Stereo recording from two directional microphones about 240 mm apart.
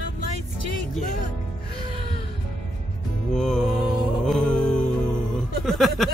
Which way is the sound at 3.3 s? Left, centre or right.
Centre.